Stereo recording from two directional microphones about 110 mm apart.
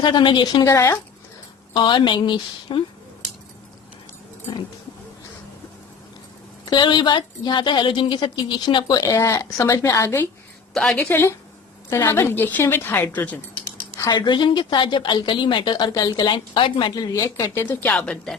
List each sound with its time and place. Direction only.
0.0 s a woman's voice: 45° left (ahead or behind)
0.6 s a woman's voice: 25° left (ahead or behind)
1.7 s a woman's voice: 45° left (ahead or behind)
6.7 s a woman's voice: 45° left (ahead or behind); by 13.4 s 15° left (ahead or behind)
14.1 s a woman's voice: 40° left (ahead or behind); by 18.3 s 10° left (ahead or behind)